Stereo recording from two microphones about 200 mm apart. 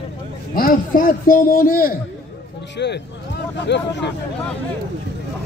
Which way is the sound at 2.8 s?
60° left (ahead or behind).